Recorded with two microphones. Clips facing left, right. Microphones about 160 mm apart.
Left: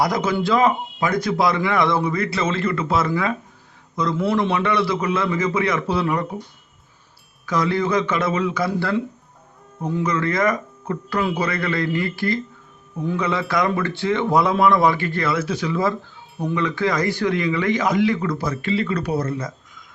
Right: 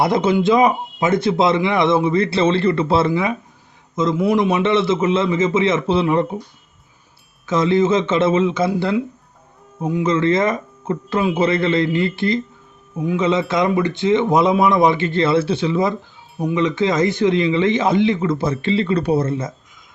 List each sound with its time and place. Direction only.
0.0 s a man's voice: 25° right (ahead or behind)
3.1 s a man's voice: 20° right (ahead or behind)
7.4 s a man's voice: 25° right (ahead or behind)